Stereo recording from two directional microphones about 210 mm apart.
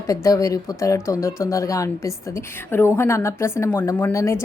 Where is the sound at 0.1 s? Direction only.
15° left (ahead or behind).